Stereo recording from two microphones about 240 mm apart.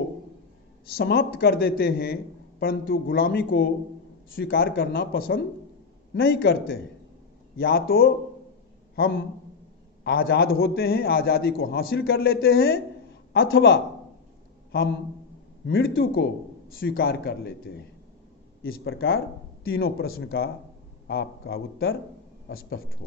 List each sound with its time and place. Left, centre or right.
0.9 s a man's voice: left
8.9 s a man's voice: left
18.9 s a man's voice: left